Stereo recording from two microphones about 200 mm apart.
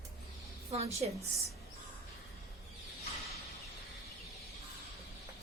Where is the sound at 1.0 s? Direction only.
35° right (ahead or behind).